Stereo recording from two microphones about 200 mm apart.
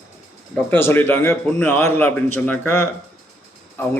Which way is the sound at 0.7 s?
10° left (ahead or behind).